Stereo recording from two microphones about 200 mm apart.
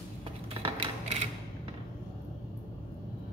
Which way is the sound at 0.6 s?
25° right (ahead or behind).